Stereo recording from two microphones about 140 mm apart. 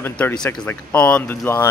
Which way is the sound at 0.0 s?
10° left (ahead or behind).